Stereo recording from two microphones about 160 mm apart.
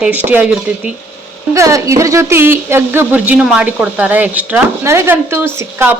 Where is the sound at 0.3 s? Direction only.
10° right (ahead or behind).